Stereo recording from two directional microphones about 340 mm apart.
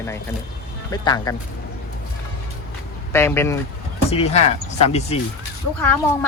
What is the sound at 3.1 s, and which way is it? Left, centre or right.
Speech, centre.